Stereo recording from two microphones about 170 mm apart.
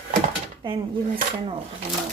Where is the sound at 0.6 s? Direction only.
30° right (ahead or behind).